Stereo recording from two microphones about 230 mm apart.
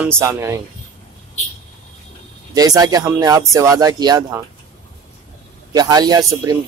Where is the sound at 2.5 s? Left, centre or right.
Centre.